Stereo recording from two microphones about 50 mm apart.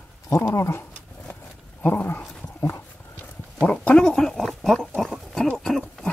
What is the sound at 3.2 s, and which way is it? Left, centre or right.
Clip-clop, left.